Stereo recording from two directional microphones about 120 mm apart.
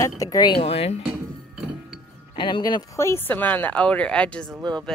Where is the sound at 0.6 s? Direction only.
55° left (ahead or behind).